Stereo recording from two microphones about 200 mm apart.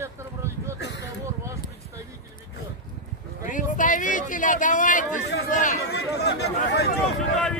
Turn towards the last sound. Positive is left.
turn(degrees=5)  # may be behind; listen again after turning